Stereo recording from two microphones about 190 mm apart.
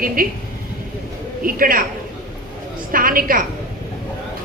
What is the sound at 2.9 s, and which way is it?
Speech, 50° right (ahead or behind).